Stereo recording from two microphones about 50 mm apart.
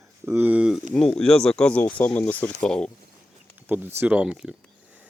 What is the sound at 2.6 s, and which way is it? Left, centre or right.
Speech, centre.